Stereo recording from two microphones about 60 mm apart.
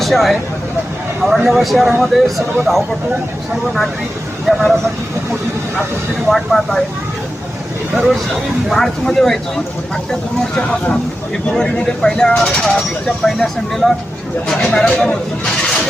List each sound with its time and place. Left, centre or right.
0.0 s speech: centre
4.5 s speech: centre
6.2 s speech: centre
7.9 s speech: centre
10.6 s speech: left